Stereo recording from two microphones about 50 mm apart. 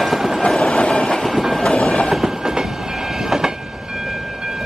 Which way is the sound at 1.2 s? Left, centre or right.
Centre.